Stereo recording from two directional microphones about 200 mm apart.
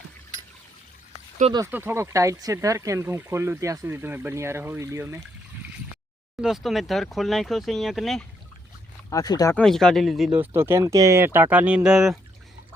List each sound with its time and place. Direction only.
1.5 s speech: 15° right (ahead or behind)
6.4 s speech: centre (ahead or behind)
9.0 s speech: 20° left (ahead or behind)
9.6 s speech: 5° left (ahead or behind)